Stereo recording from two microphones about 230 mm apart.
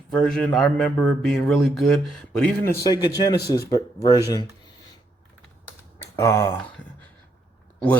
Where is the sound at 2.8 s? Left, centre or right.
Centre.